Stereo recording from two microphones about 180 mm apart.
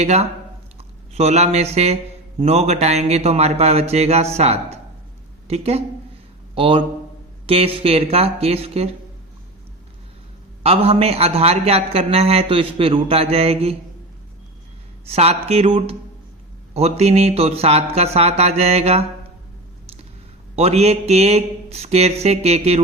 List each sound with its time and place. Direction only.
0.0 s a man's voice: 35° right (ahead or behind)
10.6 s a man's voice: 35° right (ahead or behind)
15.0 s a man's voice: 35° right (ahead or behind)
20.6 s a man's voice: 35° right (ahead or behind)